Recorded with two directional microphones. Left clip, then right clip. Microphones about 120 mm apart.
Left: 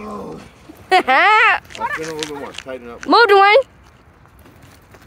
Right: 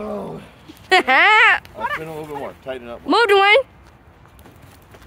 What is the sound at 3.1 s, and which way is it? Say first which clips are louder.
Speech: left 3 dB; 5° left (ahead or behind).